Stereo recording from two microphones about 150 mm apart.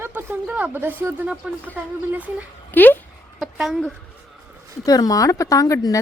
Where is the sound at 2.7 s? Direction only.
10° left (ahead or behind).